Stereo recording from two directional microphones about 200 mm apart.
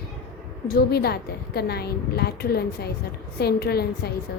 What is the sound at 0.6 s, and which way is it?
A woman's voice, 50° left (ahead or behind).